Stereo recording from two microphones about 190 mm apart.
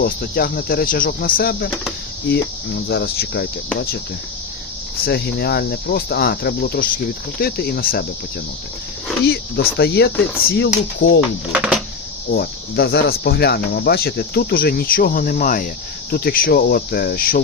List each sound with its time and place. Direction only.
0.0 s speech: 55° left (ahead or behind)
2.9 s cricket: 55° left (ahead or behind)
5.0 s cricket: 55° left (ahead or behind)
9.2 s cricket: 60° left (ahead or behind)
11.5 s speech: 5° right (ahead or behind)
12.3 s speech: 55° left (ahead or behind)